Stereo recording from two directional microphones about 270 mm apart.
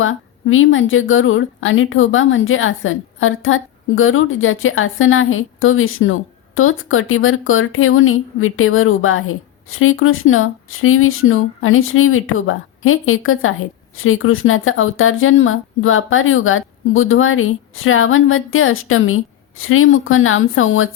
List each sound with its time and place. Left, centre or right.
0.0 s speech: left